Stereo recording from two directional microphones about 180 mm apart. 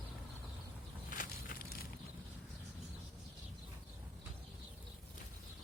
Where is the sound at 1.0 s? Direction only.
50° left (ahead or behind).